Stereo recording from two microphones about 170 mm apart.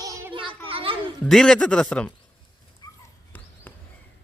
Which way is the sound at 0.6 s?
35° right (ahead or behind).